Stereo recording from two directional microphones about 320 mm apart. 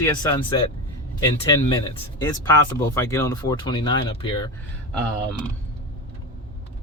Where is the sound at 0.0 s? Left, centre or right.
Centre.